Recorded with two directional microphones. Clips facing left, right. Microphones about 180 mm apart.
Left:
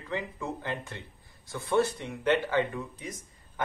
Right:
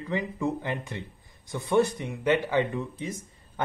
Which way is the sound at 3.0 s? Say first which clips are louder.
Right 6 dB; 30° right (ahead or behind).